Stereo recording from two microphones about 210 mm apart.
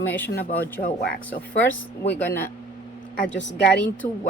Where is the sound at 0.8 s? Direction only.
45° left (ahead or behind).